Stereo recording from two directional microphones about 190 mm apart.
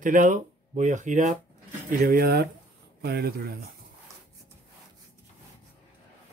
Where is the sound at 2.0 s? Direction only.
50° right (ahead or behind).